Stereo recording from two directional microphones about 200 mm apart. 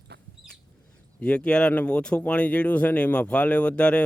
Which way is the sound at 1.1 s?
5° left (ahead or behind).